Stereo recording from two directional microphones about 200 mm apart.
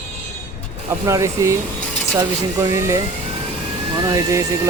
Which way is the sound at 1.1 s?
15° right (ahead or behind).